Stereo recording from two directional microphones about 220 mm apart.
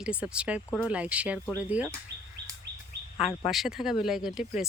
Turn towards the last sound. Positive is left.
turn(degrees=0)  # may be behind; listen again after turning